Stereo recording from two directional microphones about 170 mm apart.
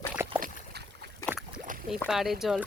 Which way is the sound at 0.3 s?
55° right (ahead or behind).